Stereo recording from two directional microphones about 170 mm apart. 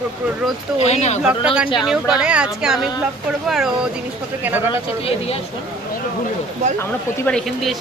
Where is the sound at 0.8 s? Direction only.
40° left (ahead or behind).